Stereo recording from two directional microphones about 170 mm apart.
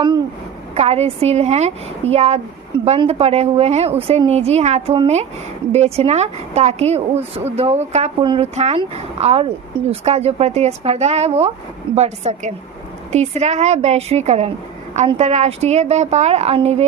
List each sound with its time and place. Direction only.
0.7 s speech: 40° right (ahead or behind)
8.2 s speech: 30° right (ahead or behind)
8.5 s speech: 40° right (ahead or behind)